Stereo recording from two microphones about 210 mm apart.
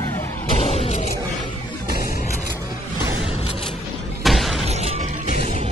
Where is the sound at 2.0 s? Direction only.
45° left (ahead or behind).